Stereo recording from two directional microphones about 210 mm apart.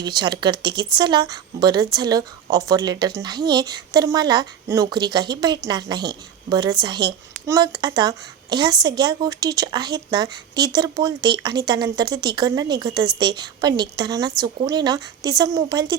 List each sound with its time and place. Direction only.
0.0 s a woman's voice: 20° right (ahead or behind)